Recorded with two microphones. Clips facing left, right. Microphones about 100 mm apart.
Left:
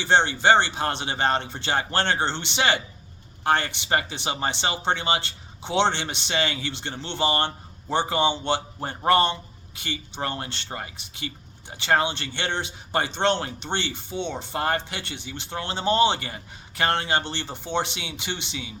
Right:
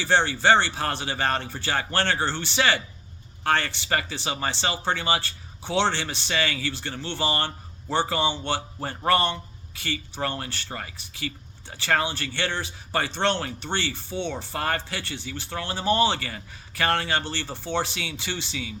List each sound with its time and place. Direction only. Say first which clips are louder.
0.0 s speech: left 1 dB; 20° left (ahead or behind)